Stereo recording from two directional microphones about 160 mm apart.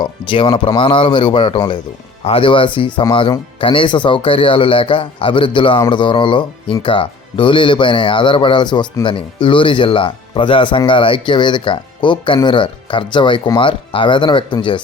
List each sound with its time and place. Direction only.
0.0 s speech: 30° left (ahead or behind)